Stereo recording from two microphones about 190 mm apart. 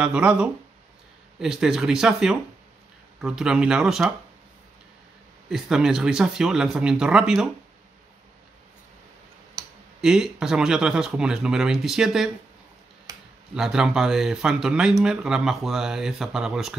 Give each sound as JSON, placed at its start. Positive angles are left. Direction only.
{"t": 0.0, "sound": "speech", "side_deg": -5}
{"t": 5.5, "sound": "speech", "side_deg": -5}
{"t": 10.0, "sound": "speech", "side_deg": -5}
{"t": 13.6, "sound": "speech", "side_deg": -5}